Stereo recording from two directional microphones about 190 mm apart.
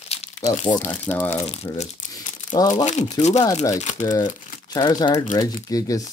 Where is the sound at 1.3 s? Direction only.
35° left (ahead or behind).